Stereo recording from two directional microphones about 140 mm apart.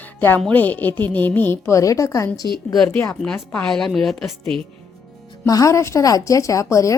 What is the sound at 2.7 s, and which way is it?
A woman's voice, 10° left (ahead or behind).